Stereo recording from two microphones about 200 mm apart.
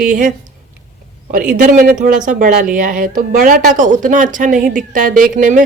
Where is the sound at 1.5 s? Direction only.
40° right (ahead or behind).